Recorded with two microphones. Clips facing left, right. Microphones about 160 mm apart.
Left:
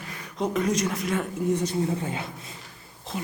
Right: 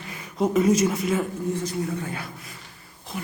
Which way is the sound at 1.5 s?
20° left (ahead or behind).